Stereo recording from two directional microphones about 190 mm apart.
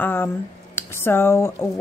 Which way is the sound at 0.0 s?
10° left (ahead or behind).